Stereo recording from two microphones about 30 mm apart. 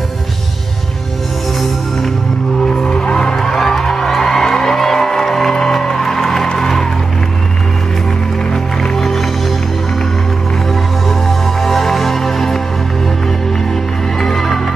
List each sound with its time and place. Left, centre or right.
2.6 s music: left
8.9 s music: centre
11.1 s music: centre
14.2 s music: centre